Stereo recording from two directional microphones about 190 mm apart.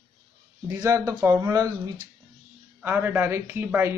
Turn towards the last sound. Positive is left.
turn(degrees=-10)  # may be behind; listen again after turning